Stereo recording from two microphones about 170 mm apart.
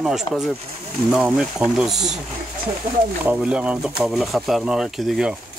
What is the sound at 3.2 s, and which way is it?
Speech, 10° right (ahead or behind).